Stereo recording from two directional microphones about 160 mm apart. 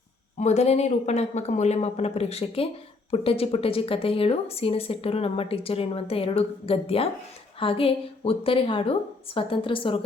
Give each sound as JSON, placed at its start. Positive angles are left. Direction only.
{"t": 0.3, "sound": "a woman's voice", "side_deg": 45}